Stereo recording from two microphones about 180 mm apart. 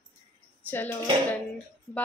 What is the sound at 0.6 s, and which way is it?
Speech, 10° left (ahead or behind).